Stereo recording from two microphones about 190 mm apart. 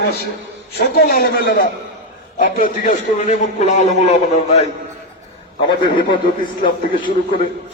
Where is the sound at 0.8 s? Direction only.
50° left (ahead or behind); by 4.6 s 35° left (ahead or behind).